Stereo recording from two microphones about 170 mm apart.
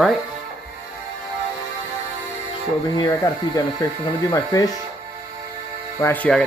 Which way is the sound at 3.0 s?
15° left (ahead or behind).